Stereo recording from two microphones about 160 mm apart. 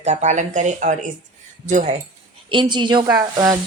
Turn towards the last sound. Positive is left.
turn(degrees=-25)  # may be behind; listen again after turning